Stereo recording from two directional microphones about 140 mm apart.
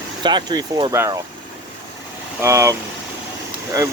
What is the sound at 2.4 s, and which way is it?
Speech, 20° right (ahead or behind).